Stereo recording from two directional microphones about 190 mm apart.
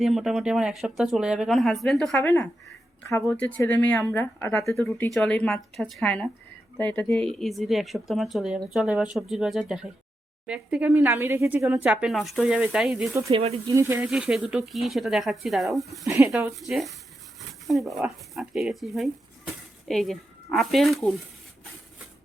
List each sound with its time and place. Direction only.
0.0 s speech: centre (ahead or behind)
13.3 s speech: 30° right (ahead or behind)
13.7 s speech: 15° right (ahead or behind)
16.0 s speech: 15° right (ahead or behind)
16.6 s speech: centre (ahead or behind)